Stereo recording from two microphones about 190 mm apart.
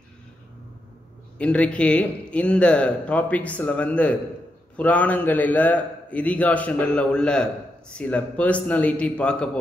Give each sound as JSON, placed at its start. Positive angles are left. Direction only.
{"t": 1.4, "sound": "a man's voice", "side_deg": 5}